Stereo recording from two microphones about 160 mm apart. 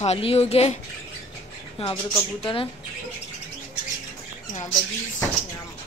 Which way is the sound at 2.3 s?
35° left (ahead or behind).